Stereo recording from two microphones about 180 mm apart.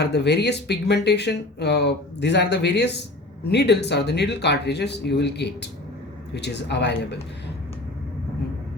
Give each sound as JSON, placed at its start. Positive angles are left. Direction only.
{"t": 0.0, "sound": "speech", "side_deg": 70}